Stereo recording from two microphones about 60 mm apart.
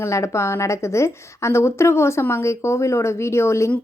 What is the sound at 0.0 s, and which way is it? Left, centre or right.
A woman's voice, left.